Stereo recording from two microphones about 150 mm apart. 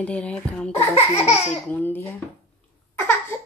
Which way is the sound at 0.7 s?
45° left (ahead or behind).